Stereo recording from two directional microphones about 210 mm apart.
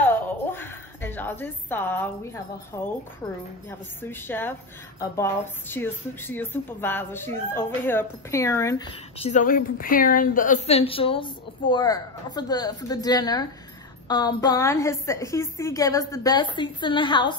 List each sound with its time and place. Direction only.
0.0 s a woman's voice: 10° left (ahead or behind)
4.0 s a woman's voice: 10° left (ahead or behind)
9.2 s a woman's voice: 35° left (ahead or behind)